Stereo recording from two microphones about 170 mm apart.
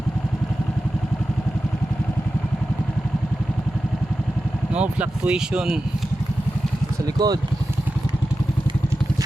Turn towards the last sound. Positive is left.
turn(degrees=-25)  # may be behind; listen again after turning